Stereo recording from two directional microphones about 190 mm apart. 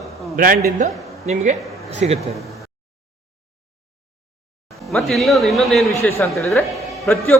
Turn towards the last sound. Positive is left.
turn(degrees=15)  # may be behind; listen again after turning